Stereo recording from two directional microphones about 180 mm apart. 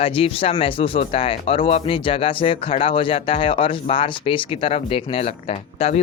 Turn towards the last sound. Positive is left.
turn(degrees=35)  # may be behind; listen again after turning